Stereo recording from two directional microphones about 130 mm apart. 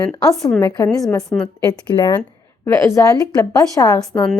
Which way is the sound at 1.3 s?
15° left (ahead or behind).